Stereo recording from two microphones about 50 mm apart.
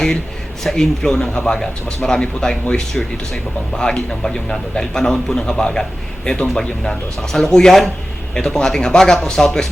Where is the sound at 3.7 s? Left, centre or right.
Centre.